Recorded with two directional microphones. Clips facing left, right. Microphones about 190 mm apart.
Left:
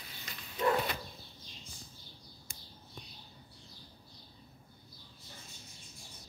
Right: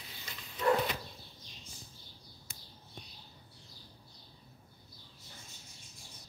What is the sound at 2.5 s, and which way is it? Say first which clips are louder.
Bird: even; 50° left (ahead or behind).